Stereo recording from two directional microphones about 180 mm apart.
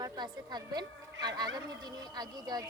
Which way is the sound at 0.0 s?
25° right (ahead or behind).